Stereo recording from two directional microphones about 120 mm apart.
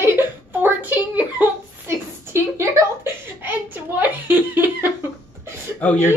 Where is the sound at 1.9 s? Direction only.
20° right (ahead or behind).